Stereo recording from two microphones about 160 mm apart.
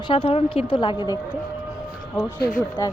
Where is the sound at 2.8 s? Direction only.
20° left (ahead or behind).